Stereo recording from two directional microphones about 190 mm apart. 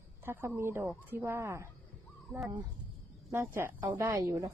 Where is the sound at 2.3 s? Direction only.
5° right (ahead or behind).